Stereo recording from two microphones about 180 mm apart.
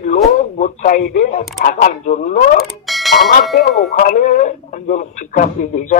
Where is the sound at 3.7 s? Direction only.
45° left (ahead or behind).